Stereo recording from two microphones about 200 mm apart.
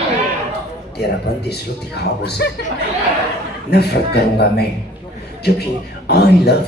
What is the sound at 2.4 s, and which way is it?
Speech, 55° left (ahead or behind).